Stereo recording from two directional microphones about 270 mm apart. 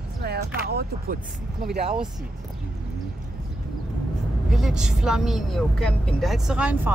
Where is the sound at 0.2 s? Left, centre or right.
Right.